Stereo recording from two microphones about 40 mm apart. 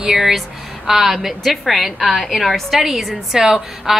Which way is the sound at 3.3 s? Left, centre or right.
Centre.